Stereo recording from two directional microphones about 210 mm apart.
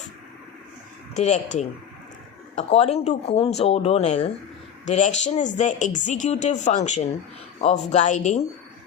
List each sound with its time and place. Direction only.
1.1 s speech: 35° left (ahead or behind)